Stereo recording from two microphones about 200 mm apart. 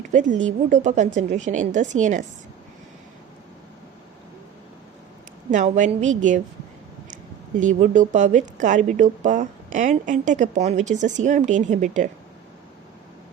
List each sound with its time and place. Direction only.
0.1 s a woman's voice: 40° right (ahead or behind)
5.5 s a woman's voice: 40° right (ahead or behind)
7.6 s a woman's voice: 40° right (ahead or behind)